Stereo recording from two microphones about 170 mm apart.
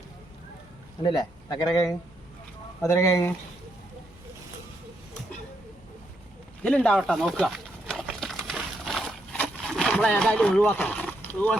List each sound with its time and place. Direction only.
1.0 s speech: 25° left (ahead or behind)
2.8 s speech: 20° left (ahead or behind)
6.6 s a sound: 5° left (ahead or behind)